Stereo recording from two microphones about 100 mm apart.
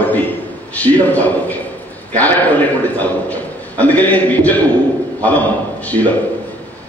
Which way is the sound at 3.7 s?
15° left (ahead or behind).